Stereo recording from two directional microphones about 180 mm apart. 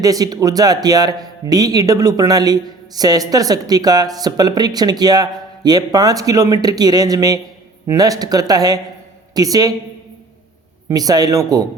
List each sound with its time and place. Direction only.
0.0 s a man's voice: 20° right (ahead or behind)
10.8 s a man's voice: 20° right (ahead or behind)